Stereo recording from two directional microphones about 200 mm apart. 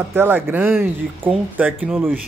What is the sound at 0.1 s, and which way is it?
Speech, 10° right (ahead or behind).